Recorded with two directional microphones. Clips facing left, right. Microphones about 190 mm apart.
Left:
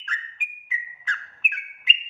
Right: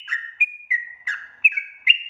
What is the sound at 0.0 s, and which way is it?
Bird, 10° right (ahead or behind).